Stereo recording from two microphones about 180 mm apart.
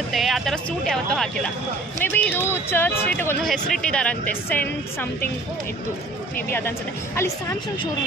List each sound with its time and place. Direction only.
0.1 s speech: centre (ahead or behind)
7.2 s speech: 15° left (ahead or behind)